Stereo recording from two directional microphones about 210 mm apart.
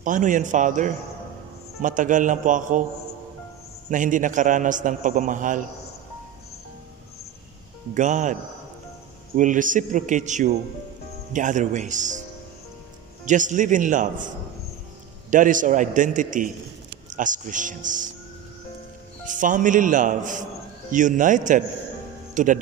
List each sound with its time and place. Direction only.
0.0 s a man's voice: 40° right (ahead or behind)
3.9 s a man's voice: 40° right (ahead or behind)
7.9 s a man's voice: 35° right (ahead or behind)
13.2 s a man's voice: 35° right (ahead or behind)
19.2 s a man's voice: 40° right (ahead or behind)